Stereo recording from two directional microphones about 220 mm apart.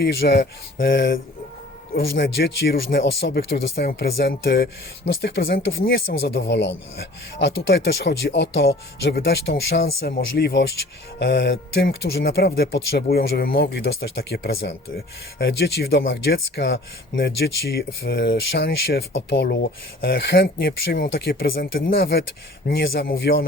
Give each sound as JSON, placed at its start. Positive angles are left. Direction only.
{"t": 0.0, "sound": "speech", "side_deg": 50}